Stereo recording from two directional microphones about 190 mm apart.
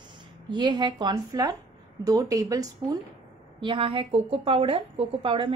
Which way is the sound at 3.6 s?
30° right (ahead or behind).